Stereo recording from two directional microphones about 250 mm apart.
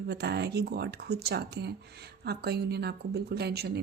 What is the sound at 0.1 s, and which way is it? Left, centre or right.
Speech, right.